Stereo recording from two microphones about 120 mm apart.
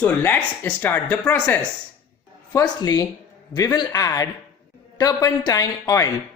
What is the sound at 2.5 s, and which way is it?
A woman's voice, 30° left (ahead or behind).